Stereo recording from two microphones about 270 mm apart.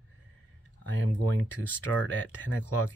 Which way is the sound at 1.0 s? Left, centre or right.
Left.